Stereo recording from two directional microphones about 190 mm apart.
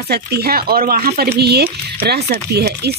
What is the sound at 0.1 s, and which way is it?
Speech, 55° right (ahead or behind).